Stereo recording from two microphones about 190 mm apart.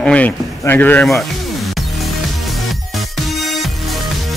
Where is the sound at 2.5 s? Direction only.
Centre (ahead or behind).